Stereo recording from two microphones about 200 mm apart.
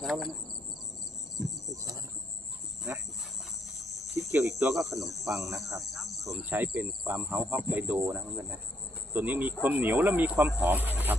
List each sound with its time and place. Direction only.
0.0 s speech: centre (ahead or behind)
1.7 s cricket: 15° right (ahead or behind)
3.8 s cricket: centre (ahead or behind)
4.2 s cricket: 15° right (ahead or behind)
4.7 s speech: centre (ahead or behind)
6.2 s speech: 15° right (ahead or behind)